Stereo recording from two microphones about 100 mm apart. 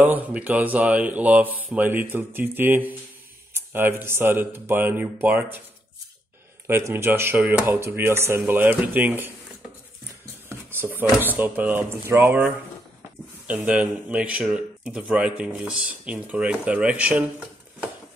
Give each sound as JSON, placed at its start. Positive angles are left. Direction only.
{"t": 0.0, "sound": "speech", "side_deg": -15}
{"t": 6.7, "sound": "speech", "side_deg": -25}
{"t": 10.7, "sound": "speech", "side_deg": -20}
{"t": 13.5, "sound": "speech", "side_deg": -15}